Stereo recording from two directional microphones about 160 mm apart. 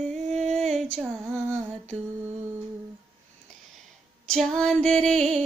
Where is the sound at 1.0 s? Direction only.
15° right (ahead or behind).